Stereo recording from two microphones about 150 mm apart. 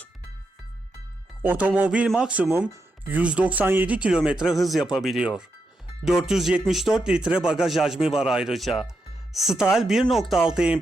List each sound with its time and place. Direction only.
1.4 s speech: 10° right (ahead or behind)